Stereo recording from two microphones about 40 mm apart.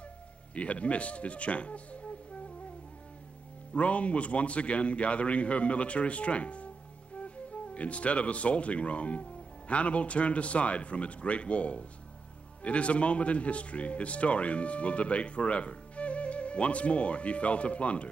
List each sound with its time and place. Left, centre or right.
0.6 s speech: left
3.7 s speech: left